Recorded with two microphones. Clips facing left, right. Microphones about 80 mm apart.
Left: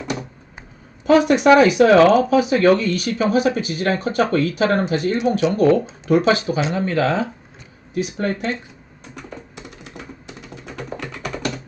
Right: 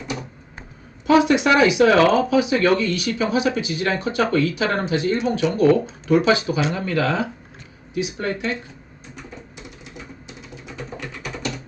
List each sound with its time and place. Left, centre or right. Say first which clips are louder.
1.0 s speech: left 3 dB; left
10.8 s music: left 3 dB; left